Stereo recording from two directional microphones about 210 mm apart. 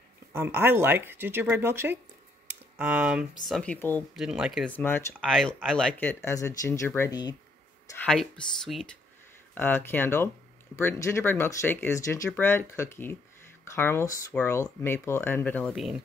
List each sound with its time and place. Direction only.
0.3 s speech: 10° right (ahead or behind)
4.8 s speech: 10° left (ahead or behind)
8.0 s speech: 5° left (ahead or behind)